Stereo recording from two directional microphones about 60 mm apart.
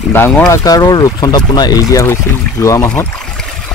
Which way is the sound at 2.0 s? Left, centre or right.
Left.